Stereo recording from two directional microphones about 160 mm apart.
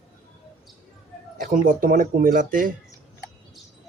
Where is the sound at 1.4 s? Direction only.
55° right (ahead or behind).